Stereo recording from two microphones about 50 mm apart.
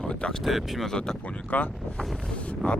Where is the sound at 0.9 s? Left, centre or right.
Centre.